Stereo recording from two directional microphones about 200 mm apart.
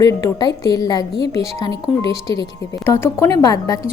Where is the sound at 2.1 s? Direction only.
25° right (ahead or behind).